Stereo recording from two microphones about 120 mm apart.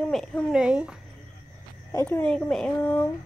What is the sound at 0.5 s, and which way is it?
Speech, 5° right (ahead or behind).